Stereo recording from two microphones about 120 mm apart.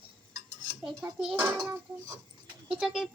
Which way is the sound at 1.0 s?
10° right (ahead or behind).